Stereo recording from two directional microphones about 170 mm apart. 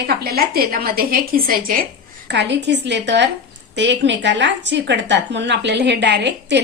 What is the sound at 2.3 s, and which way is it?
A woman's voice, 90° right.